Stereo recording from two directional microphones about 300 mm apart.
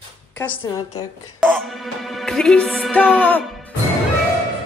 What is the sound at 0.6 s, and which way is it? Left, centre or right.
Speech, centre.